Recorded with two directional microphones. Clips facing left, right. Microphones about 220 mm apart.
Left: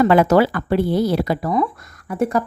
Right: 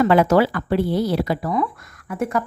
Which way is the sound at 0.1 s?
45° left (ahead or behind).